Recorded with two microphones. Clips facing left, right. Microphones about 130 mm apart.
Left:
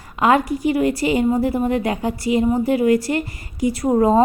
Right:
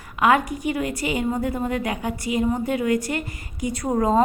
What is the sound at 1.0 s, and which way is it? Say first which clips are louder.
A woman's voice: left 6 dB; 35° left (ahead or behind).